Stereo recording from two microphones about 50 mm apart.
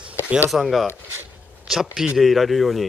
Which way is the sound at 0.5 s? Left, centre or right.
Centre.